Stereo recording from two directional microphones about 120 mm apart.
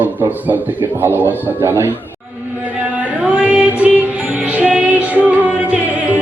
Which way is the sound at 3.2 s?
10° right (ahead or behind).